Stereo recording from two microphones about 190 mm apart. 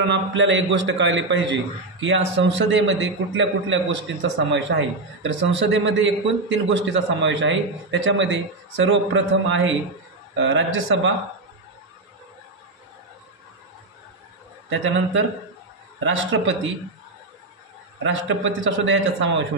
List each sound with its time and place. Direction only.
0.0 s a man's voice: 70° right (ahead or behind)
14.7 s a man's voice: 80° right
18.0 s a man's voice: 80° right